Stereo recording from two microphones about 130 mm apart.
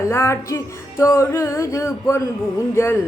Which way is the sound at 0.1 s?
20° left (ahead or behind).